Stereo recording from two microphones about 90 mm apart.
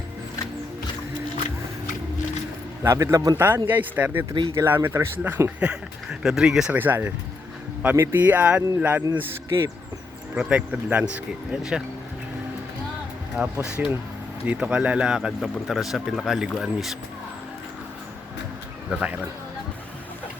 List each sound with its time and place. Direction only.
2.8 s a man's voice: 35° right (ahead or behind)
3.3 s speech: 25° right (ahead or behind)
5.5 s speech: 10° right (ahead or behind)
6.7 s speech: 20° right (ahead or behind)
13.3 s speech: 10° right (ahead or behind)
18.9 s speech: 15° right (ahead or behind)